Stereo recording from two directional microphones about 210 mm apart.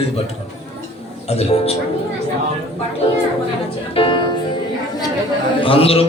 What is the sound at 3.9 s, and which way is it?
Music, 25° left (ahead or behind).